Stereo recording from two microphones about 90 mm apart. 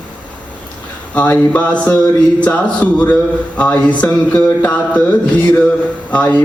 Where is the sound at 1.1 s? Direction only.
15° left (ahead or behind).